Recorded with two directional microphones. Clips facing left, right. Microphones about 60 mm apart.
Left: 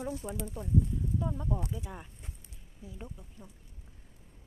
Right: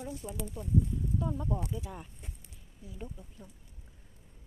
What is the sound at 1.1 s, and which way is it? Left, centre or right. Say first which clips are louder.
Speech: right 1 dB; centre.